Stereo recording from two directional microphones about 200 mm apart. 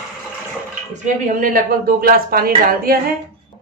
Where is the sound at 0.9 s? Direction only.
40° right (ahead or behind).